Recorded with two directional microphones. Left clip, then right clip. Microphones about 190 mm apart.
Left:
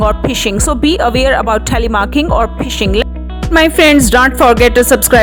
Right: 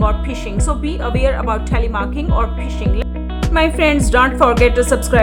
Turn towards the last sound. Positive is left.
turn(degrees=40)  # may be behind; listen again after turning